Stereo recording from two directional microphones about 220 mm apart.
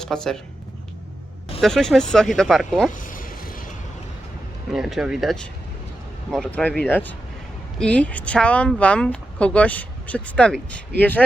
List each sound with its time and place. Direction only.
0.0 s speech: 5° left (ahead or behind)
1.6 s speech: centre (ahead or behind)
2.9 s vehicle: 40° left (ahead or behind)
4.7 s speech: centre (ahead or behind)